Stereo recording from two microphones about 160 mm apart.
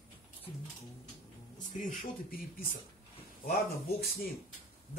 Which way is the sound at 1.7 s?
55° left (ahead or behind).